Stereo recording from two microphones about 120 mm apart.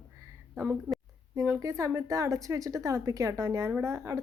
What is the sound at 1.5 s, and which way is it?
A woman's voice, 25° right (ahead or behind).